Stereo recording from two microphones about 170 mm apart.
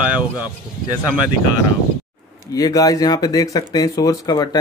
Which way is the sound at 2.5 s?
20° left (ahead or behind).